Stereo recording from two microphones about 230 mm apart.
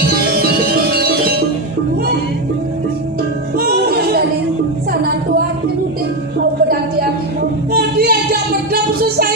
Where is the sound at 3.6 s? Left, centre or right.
Right.